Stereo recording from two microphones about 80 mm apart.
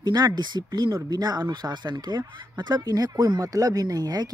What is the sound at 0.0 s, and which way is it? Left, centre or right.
Speech, right.